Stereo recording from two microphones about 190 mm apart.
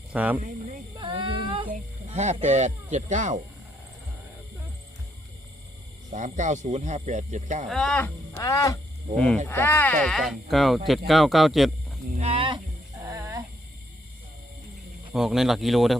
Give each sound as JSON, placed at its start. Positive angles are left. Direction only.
{"t": 0.1, "sound": "speech", "side_deg": -5}
{"t": 0.9, "sound": "child singing", "side_deg": -25}
{"t": 2.0, "sound": "speech", "side_deg": -35}
{"t": 6.1, "sound": "speech", "side_deg": -40}
{"t": 7.7, "sound": "speech", "side_deg": 0}
{"t": 8.4, "sound": "music", "side_deg": 20}
{"t": 9.1, "sound": "speech", "side_deg": 5}
{"t": 12.1, "sound": "music", "side_deg": -30}
{"t": 15.1, "sound": "speech", "side_deg": 0}